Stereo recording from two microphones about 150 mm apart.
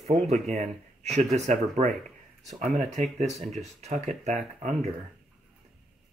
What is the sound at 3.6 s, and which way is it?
Speech, 50° right (ahead or behind).